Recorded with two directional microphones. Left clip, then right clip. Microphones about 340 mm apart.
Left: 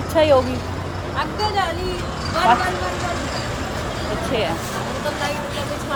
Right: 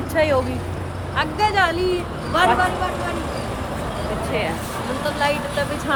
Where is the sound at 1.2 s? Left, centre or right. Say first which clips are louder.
Right 3 dB; right.